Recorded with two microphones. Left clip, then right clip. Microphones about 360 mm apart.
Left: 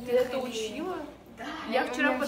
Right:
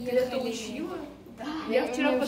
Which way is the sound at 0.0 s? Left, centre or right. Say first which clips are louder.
Even; centre.